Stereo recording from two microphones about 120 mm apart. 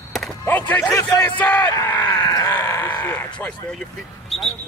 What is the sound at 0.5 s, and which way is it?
Speech, 15° left (ahead or behind).